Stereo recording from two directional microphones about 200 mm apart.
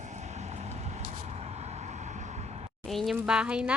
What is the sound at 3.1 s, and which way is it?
Speech, 5° right (ahead or behind).